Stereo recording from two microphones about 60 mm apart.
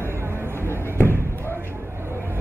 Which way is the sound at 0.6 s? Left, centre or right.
Left.